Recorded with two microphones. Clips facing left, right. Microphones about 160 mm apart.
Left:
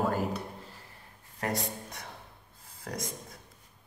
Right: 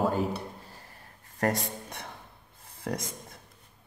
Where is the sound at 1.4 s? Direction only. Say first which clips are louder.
Right 4 dB; 50° right (ahead or behind).